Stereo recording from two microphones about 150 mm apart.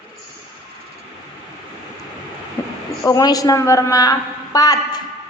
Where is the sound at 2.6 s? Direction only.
20° left (ahead or behind).